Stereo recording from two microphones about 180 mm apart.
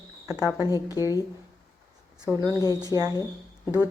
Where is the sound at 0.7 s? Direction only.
20° left (ahead or behind).